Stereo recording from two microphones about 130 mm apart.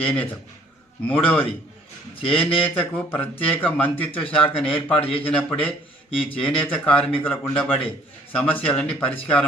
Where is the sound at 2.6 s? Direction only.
10° left (ahead or behind).